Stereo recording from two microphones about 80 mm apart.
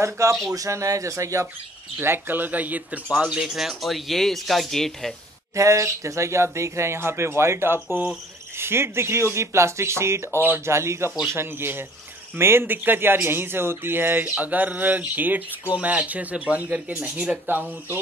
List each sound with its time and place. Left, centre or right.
0.0 s speech: right
2.0 s speech: right; by 5.1 s centre
5.6 s speech: right
10.4 s speech: right
10.7 s speech: right